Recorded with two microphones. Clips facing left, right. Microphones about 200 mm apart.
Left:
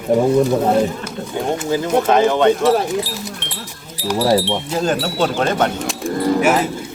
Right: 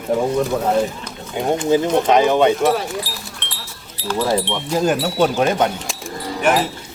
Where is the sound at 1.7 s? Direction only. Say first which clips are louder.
Right 1 dB; 20° right (ahead or behind).